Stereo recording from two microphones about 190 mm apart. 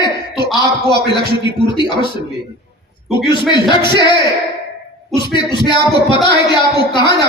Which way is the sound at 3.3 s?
25° left (ahead or behind).